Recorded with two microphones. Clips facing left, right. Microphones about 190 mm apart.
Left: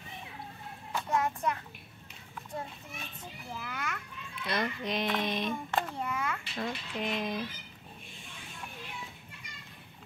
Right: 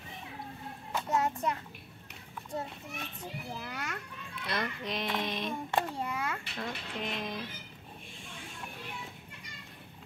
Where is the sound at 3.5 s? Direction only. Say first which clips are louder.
Left 4 dB; 30° right (ahead or behind).